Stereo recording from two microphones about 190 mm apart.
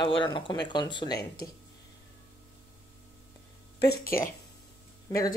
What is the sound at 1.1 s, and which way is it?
Speech, 55° left (ahead or behind).